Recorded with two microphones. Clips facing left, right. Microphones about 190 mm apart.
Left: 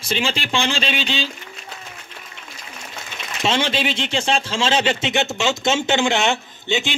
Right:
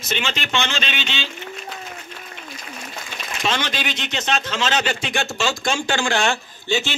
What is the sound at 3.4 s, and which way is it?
A man's voice, 25° left (ahead or behind).